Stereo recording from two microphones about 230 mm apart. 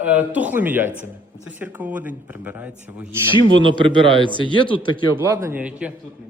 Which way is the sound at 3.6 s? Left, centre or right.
Right.